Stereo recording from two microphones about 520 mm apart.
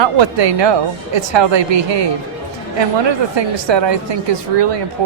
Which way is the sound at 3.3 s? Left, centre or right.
Right.